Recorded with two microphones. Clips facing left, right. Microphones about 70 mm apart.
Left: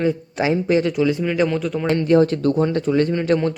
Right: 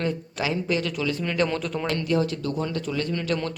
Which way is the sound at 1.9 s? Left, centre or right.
Left.